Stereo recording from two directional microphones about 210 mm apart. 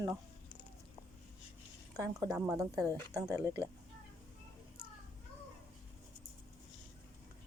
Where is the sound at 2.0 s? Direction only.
15° right (ahead or behind).